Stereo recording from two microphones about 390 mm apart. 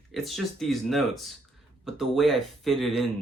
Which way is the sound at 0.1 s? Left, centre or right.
Centre.